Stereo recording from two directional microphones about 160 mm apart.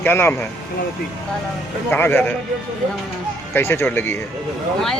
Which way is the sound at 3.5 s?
15° left (ahead or behind).